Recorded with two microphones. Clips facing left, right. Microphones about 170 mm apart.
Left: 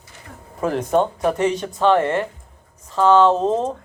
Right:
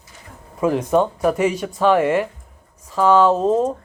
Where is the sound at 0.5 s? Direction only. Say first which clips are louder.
Right 2 dB; 5° right (ahead or behind).